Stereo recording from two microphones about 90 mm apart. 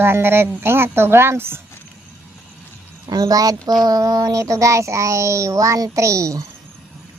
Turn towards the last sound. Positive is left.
turn(degrees=-40)  # may be behind; listen again after turning